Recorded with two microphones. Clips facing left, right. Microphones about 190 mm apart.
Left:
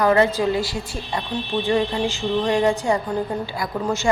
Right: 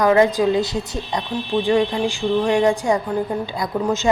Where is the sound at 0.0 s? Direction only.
15° right (ahead or behind).